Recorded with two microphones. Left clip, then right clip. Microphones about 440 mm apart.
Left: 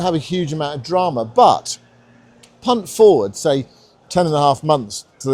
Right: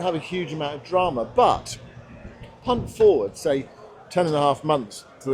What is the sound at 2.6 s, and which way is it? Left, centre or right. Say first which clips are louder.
A man's voice: left 6 dB; left.